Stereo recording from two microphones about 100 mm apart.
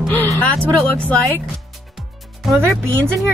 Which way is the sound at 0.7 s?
15° left (ahead or behind).